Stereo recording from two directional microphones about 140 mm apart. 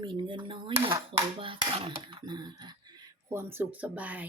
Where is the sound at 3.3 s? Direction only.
15° right (ahead or behind).